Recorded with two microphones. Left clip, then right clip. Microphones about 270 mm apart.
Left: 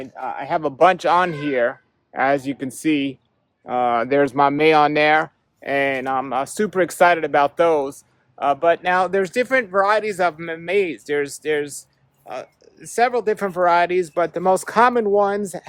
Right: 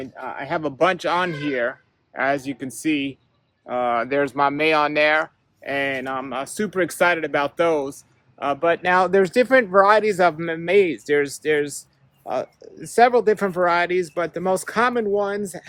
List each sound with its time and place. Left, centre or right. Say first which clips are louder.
0.0 s speech: left 3 dB; centre
12.2 s speech: right 6 dB; centre